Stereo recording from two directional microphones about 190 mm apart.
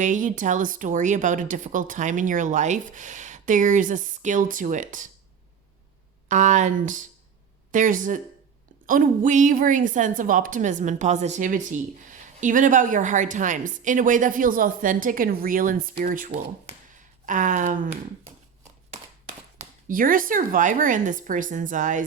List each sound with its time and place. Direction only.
0.0 s speech: 40° right (ahead or behind)
6.2 s a woman's voice: 40° right (ahead or behind)
19.5 s a woman's voice: 45° right (ahead or behind)